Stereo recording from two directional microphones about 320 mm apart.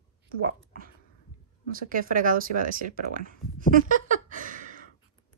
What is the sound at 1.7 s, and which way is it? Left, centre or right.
Speech, right.